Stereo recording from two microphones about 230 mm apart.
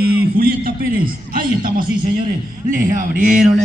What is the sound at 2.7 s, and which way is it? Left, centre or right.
Speech, right.